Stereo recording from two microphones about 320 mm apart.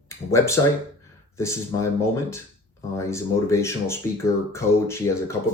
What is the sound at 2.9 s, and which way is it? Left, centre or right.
Speech, centre.